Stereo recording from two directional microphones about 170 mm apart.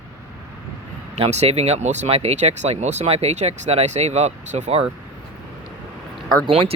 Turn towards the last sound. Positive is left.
turn(degrees=-30)  # may be behind; listen again after turning